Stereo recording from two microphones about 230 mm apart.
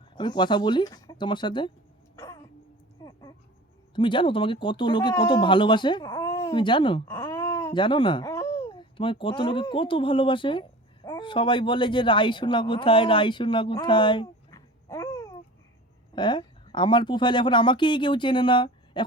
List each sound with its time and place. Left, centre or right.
0.2 s speech: centre
2.1 s throat clearing: centre
3.0 s a sound: centre
3.9 s speech: left